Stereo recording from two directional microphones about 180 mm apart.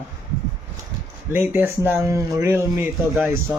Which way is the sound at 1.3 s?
15° right (ahead or behind).